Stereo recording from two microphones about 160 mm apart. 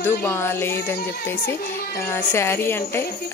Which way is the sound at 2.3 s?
15° left (ahead or behind).